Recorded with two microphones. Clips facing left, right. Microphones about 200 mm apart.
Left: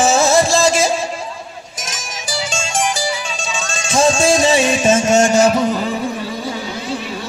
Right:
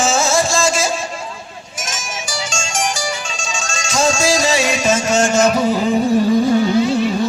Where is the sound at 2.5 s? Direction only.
60° left (ahead or behind).